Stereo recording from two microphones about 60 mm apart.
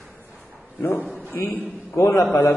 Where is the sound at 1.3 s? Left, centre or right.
Left.